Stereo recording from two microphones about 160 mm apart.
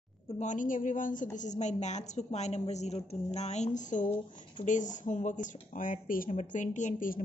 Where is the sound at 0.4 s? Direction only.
50° left (ahead or behind).